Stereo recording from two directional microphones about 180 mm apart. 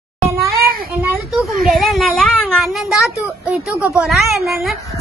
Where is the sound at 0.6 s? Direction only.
55° right (ahead or behind).